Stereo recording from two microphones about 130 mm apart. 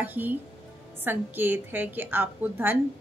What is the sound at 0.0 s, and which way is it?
A woman's voice, 15° right (ahead or behind).